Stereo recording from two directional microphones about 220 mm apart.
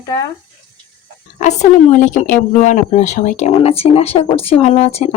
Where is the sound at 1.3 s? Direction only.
30° left (ahead or behind).